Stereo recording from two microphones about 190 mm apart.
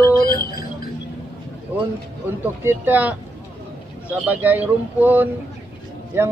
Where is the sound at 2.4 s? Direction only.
10° right (ahead or behind).